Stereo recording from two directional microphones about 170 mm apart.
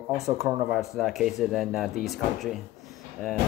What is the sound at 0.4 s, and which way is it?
Speech, centre (ahead or behind).